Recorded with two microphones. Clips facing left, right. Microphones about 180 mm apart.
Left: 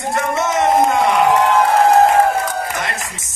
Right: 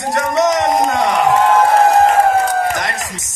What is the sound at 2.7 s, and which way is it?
Music, 40° right (ahead or behind).